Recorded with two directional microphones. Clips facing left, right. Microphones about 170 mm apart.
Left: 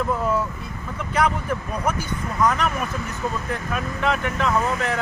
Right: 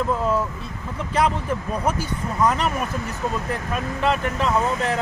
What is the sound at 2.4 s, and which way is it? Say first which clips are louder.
Speech: even; 30° right (ahead or behind).